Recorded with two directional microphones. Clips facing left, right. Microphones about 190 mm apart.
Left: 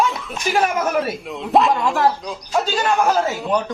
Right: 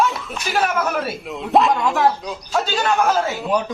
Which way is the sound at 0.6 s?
10° left (ahead or behind).